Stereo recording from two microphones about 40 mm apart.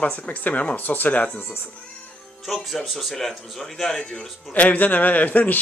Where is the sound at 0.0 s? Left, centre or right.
Left.